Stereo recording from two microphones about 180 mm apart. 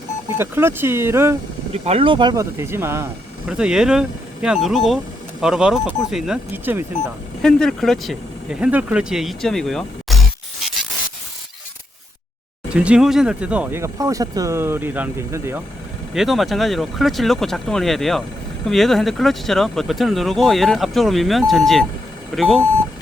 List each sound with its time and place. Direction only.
0.3 s speech: 10° right (ahead or behind)
1.7 s speech: 35° right (ahead or behind); by 6.8 s 10° right (ahead or behind)
7.4 s speech: 5° left (ahead or behind)
12.7 s speech: 5° right (ahead or behind)
16.1 s speech: centre (ahead or behind)